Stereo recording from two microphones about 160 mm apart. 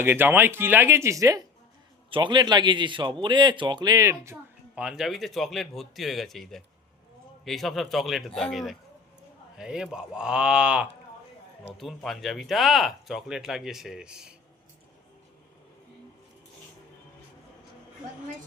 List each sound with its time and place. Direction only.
0.0 s speech: 15° right (ahead or behind)
2.0 s a man's voice: 30° right (ahead or behind)
4.8 s speech: 5° right (ahead or behind)